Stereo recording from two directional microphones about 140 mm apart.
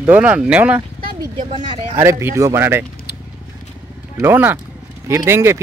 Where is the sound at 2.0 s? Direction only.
20° right (ahead or behind).